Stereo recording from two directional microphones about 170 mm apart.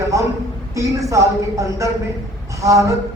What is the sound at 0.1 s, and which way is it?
A man's voice, 20° right (ahead or behind).